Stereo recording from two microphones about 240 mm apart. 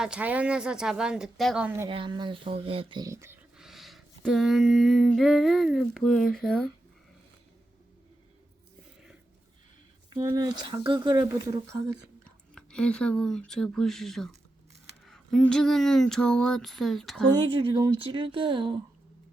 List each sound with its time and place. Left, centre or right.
0.0 s speech: centre
1.9 s speech: right; by 6.7 s centre
10.2 s speech: centre
12.2 s speech: centre
17.3 s speech: right